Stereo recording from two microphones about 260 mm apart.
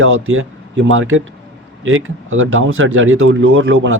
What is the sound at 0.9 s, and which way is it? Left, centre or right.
Speech, right.